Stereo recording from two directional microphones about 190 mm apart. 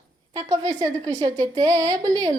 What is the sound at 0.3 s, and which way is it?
A woman's voice, 20° right (ahead or behind).